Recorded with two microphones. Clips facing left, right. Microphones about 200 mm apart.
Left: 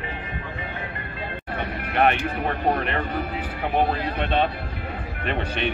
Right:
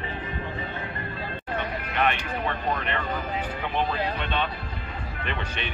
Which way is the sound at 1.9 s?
50° left (ahead or behind).